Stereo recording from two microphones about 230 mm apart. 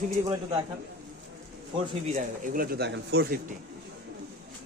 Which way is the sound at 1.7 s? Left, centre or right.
Right.